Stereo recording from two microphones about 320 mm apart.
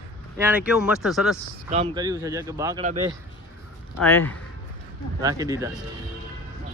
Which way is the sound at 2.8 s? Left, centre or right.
Right.